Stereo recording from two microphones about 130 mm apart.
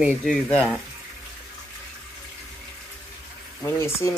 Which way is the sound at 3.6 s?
20° left (ahead or behind).